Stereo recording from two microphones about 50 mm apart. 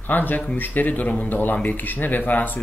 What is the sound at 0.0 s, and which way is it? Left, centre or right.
Speech, left.